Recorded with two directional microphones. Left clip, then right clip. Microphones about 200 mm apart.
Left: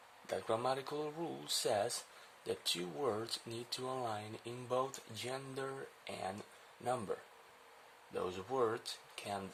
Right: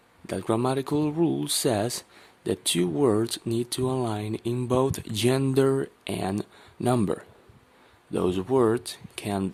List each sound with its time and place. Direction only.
0.3 s speech: 30° right (ahead or behind)